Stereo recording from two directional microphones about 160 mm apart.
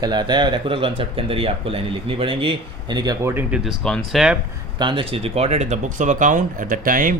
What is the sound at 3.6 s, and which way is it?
Speech, centre (ahead or behind).